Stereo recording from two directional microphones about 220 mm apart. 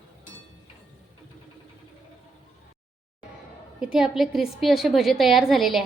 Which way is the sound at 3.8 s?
Centre (ahead or behind).